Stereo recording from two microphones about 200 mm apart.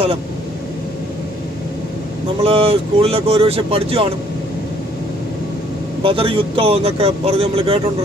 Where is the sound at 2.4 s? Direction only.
30° right (ahead or behind).